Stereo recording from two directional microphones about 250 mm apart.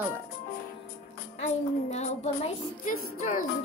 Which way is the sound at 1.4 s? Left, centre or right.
Left.